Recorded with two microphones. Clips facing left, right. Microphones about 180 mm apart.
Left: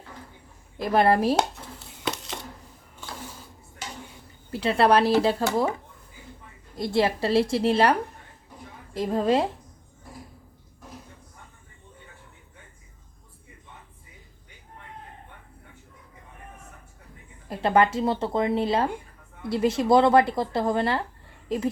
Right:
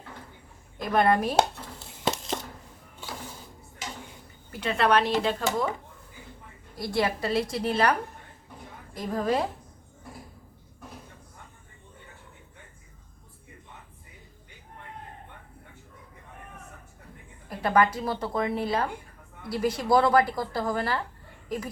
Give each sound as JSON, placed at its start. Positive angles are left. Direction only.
{"t": 0.8, "sound": "speech", "side_deg": 30}
{"t": 4.5, "sound": "speech", "side_deg": 35}
{"t": 6.7, "sound": "speech", "side_deg": 25}
{"t": 17.5, "sound": "speech", "side_deg": 25}